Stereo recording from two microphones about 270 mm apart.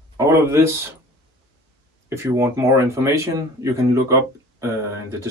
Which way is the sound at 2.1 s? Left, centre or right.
Centre.